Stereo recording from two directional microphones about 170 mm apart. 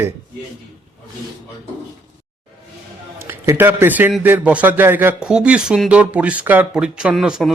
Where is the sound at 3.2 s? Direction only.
15° right (ahead or behind).